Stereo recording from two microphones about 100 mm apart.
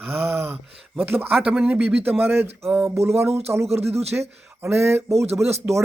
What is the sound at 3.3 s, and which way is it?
Speech, 90° right.